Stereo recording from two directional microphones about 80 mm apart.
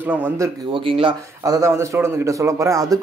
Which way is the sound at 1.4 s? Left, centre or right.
Right.